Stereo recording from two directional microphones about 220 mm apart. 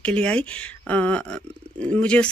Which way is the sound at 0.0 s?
5° left (ahead or behind).